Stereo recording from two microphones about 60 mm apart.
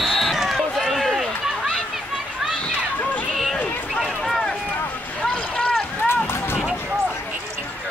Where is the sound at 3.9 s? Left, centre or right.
Centre.